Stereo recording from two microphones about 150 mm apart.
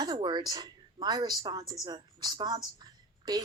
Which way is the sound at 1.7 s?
25° right (ahead or behind).